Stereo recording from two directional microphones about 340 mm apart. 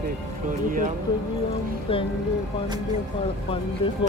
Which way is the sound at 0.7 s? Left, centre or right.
Right.